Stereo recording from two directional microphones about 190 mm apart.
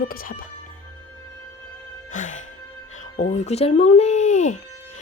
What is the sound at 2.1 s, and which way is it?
Music, 40° left (ahead or behind).